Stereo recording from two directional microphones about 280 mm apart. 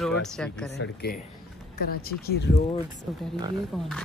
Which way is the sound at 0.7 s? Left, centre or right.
Left.